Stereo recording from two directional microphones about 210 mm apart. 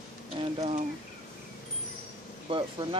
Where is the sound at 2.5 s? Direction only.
25° right (ahead or behind).